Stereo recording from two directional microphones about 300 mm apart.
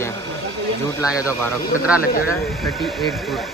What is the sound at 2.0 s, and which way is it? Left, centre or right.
Speech, left.